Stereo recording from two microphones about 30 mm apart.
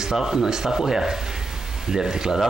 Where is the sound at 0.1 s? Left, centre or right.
Centre.